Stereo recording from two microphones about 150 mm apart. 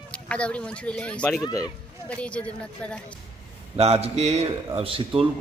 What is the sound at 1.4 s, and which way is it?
Speech, 25° left (ahead or behind).